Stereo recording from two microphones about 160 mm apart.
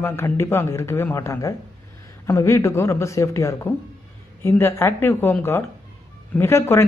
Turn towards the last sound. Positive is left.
turn(degrees=15)  # may be behind; listen again after turning